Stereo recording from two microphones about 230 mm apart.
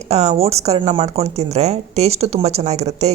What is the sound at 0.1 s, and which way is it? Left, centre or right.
Speech, right.